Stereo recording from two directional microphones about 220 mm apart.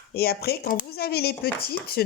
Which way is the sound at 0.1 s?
45° left (ahead or behind).